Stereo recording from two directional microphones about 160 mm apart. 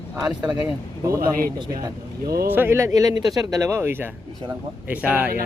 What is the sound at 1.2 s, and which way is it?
Speech, 65° right (ahead or behind).